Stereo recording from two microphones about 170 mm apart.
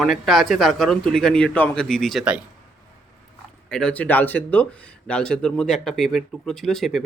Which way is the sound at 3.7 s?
5° left (ahead or behind).